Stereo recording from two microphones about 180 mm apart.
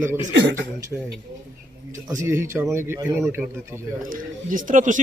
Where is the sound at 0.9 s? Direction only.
5° right (ahead or behind).